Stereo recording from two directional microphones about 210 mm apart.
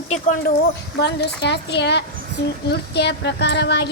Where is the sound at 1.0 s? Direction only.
55° left (ahead or behind).